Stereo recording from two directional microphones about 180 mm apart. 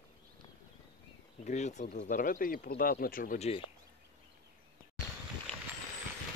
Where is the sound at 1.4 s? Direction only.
40° left (ahead or behind).